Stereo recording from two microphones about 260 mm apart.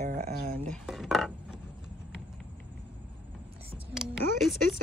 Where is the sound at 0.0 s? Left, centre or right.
Right.